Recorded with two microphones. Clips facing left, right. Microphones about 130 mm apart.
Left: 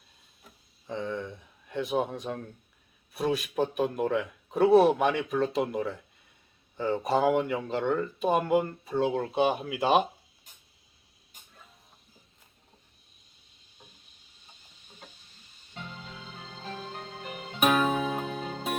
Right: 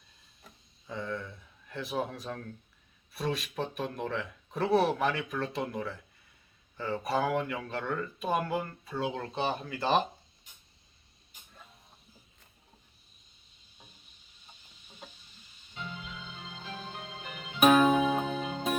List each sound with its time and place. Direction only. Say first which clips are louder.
0.9 s speech: left 4 dB; 20° left (ahead or behind)
3.2 s speech: left 6 dB; 5° left (ahead or behind)
5.4 s speech: left 6 dB; 20° left (ahead or behind)
9.0 s speech: left 7 dB; 5° left (ahead or behind)
17.6 s music: right 3 dB; centre (ahead or behind)